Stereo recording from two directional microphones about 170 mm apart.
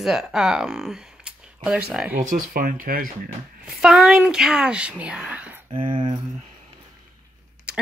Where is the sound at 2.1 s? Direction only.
50° right (ahead or behind).